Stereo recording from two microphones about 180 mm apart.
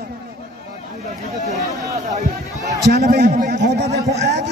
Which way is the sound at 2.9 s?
60° right (ahead or behind).